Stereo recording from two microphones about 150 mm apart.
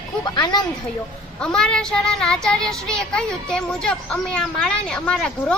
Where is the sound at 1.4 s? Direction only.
5° left (ahead or behind).